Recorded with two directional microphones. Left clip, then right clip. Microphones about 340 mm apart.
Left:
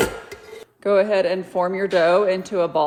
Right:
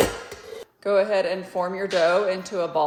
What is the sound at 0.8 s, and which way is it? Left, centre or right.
Speech, left.